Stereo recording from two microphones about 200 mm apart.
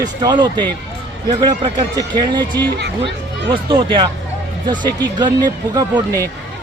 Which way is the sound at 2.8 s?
60° right (ahead or behind).